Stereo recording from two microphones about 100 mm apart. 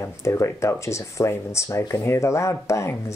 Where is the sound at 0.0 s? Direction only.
30° left (ahead or behind).